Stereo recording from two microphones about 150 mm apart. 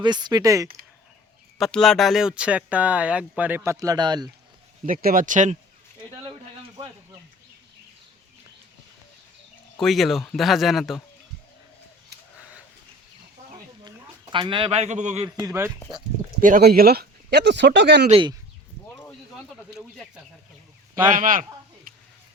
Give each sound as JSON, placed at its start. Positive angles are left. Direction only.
{"t": 0.0, "sound": "speech", "side_deg": -30}
{"t": 1.5, "sound": "speech", "side_deg": 0}
{"t": 4.9, "sound": "speech", "side_deg": -70}
{"t": 9.8, "sound": "speech", "side_deg": 0}
{"t": 14.3, "sound": "a man's voice", "side_deg": -35}
{"t": 15.2, "sound": "speech", "side_deg": -25}
{"t": 16.4, "sound": "speech", "side_deg": -75}
{"t": 18.1, "sound": "speech", "side_deg": -35}
{"t": 21.1, "sound": "speech", "side_deg": -65}
{"t": 21.9, "sound": "sizzle", "side_deg": -70}